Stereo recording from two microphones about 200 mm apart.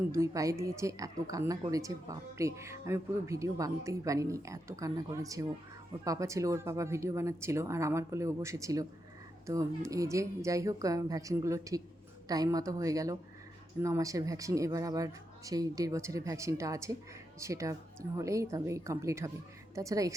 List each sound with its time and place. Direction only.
0.1 s a woman's voice: 15° right (ahead or behind)